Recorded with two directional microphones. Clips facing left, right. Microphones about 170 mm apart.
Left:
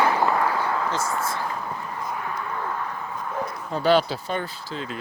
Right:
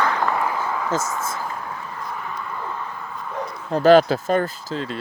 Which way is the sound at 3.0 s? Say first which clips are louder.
Even; 5° left (ahead or behind).